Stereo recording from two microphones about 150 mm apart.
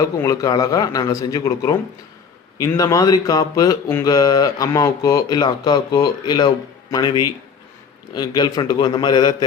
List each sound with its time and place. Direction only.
0.0 s speech: 20° left (ahead or behind)